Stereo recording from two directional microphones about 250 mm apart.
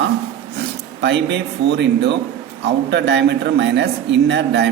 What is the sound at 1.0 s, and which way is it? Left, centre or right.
A man's voice, right.